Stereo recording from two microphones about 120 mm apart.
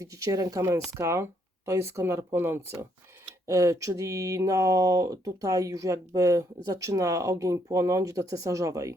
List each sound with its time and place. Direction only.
0.0 s speech: 30° right (ahead or behind)